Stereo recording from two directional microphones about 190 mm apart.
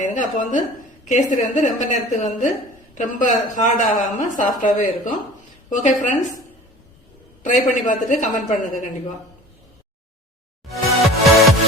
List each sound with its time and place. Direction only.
0.0 s a woman's voice: 40° left (ahead or behind)
7.9 s a woman's voice: 40° left (ahead or behind)
10.7 s music: centre (ahead or behind)